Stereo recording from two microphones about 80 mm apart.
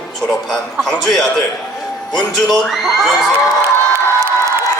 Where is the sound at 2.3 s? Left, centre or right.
Centre.